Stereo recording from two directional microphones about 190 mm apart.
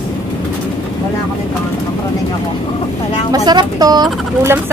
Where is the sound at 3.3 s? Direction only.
20° right (ahead or behind).